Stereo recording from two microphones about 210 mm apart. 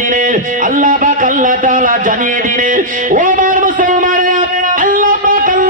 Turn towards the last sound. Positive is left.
turn(degrees=-40)  # may be behind; listen again after turning